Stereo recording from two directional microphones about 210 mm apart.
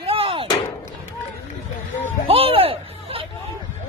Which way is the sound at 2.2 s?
25° right (ahead or behind).